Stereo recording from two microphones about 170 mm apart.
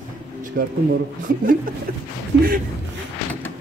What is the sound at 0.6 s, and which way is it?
Speech, 70° right (ahead or behind).